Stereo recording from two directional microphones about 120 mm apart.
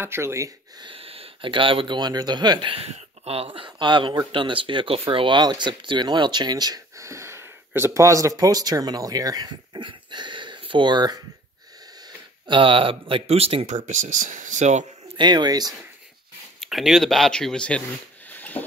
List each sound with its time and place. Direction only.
0.0 s speech: 20° right (ahead or behind)
0.7 s speech: 45° right (ahead or behind)
2.7 s speech: 55° right (ahead or behind); by 11.1 s 35° right (ahead or behind)
12.4 s speech: 45° right (ahead or behind)
13.7 s speech: 90° right
15.1 s speech: 35° right (ahead or behind)
16.5 s speech: centre (ahead or behind)
18.3 s a sound: 15° left (ahead or behind)